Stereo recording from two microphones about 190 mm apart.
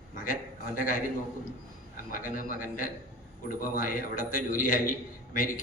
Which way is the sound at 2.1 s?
45° left (ahead or behind).